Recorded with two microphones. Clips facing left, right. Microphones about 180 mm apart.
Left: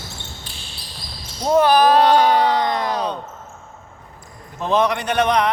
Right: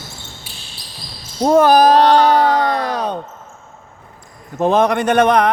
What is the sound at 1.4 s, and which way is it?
Speech, 45° right (ahead or behind).